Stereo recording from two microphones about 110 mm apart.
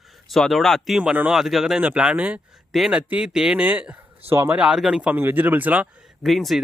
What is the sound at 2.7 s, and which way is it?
A man's voice, centre (ahead or behind).